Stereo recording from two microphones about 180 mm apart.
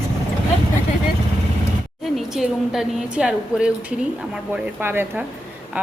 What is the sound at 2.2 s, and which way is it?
Speech, centre (ahead or behind).